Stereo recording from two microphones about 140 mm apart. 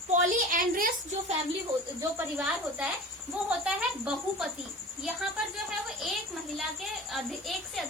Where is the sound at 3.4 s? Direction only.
5° right (ahead or behind).